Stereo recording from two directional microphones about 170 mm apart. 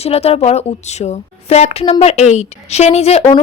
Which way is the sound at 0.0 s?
35° left (ahead or behind).